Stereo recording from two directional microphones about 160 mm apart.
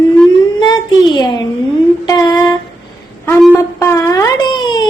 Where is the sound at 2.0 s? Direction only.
25° left (ahead or behind).